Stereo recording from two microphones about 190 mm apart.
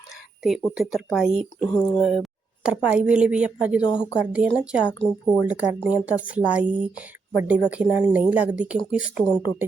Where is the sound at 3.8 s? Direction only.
20° left (ahead or behind).